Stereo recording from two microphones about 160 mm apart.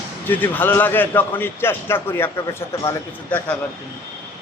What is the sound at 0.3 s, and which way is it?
A man's voice, 10° left (ahead or behind).